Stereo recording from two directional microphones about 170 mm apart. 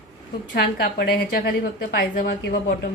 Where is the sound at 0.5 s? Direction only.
65° left (ahead or behind).